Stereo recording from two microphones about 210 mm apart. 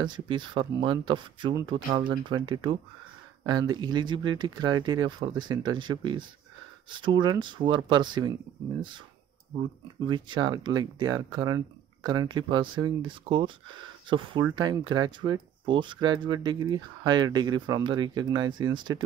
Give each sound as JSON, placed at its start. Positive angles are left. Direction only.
{"t": 0.0, "sound": "speech", "side_deg": -20}
{"t": 10.0, "sound": "speech", "side_deg": -20}